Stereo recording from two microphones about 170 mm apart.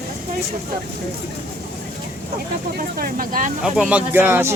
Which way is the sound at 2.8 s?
55° right (ahead or behind).